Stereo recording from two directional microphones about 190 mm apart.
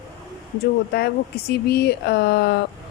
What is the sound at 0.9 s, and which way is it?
Speech, 55° left (ahead or behind).